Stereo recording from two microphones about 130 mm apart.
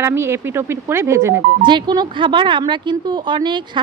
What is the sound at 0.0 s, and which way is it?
Speech, 20° right (ahead or behind).